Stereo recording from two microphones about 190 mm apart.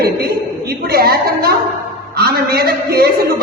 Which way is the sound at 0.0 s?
55° right (ahead or behind).